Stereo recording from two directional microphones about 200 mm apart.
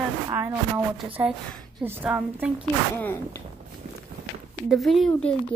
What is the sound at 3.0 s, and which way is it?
Speech, 10° left (ahead or behind).